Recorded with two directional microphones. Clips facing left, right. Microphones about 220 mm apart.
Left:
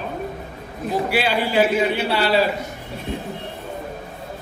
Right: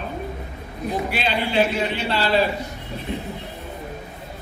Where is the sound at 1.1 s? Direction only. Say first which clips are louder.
Left 3 dB; 10° left (ahead or behind).